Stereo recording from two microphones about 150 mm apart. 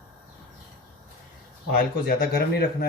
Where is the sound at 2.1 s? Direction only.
90° left.